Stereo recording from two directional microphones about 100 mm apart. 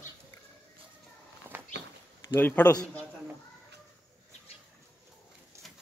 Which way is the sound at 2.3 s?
20° left (ahead or behind).